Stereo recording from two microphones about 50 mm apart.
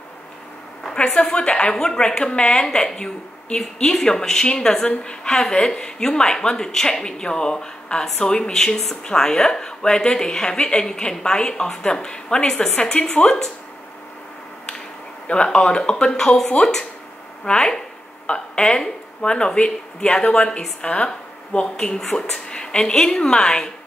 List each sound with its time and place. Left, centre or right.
0.8 s a woman's voice: centre
15.2 s a woman's voice: left
21.9 s a woman's voice: centre